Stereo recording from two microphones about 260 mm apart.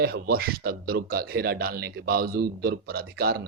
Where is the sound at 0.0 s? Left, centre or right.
Right.